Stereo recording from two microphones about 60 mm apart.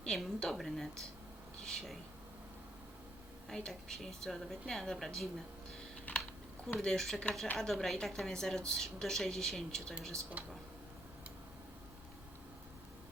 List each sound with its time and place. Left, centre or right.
0.0 s speech: centre
3.5 s speech: centre
6.1 s typing: left
6.7 s speech: centre